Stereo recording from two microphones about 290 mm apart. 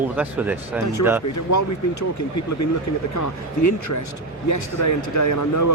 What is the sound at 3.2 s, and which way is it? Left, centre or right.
Speech, left.